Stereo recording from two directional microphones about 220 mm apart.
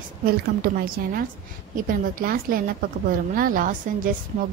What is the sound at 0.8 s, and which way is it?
A woman's voice, 40° right (ahead or behind).